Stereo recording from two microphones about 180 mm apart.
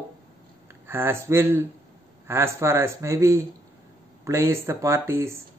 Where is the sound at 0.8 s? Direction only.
15° right (ahead or behind).